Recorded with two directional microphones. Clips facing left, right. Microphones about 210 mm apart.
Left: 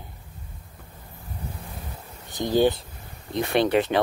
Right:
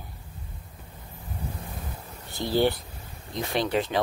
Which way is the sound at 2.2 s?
15° left (ahead or behind).